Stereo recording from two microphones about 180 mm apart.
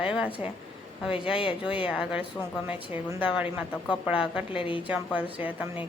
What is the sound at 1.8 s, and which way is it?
A woman's voice, 5° right (ahead or behind).